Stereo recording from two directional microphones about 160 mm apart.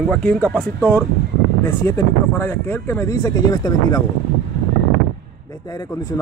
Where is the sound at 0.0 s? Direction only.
5° left (ahead or behind); by 4.0 s 25° left (ahead or behind).